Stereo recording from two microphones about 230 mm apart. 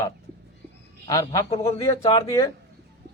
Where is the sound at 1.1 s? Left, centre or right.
Centre.